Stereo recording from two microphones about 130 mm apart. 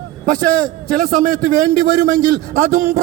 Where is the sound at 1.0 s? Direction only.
90° right.